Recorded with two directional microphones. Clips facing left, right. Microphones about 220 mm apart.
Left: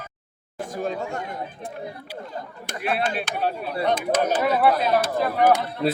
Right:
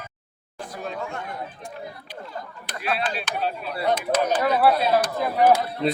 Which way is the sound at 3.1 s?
55° left (ahead or behind).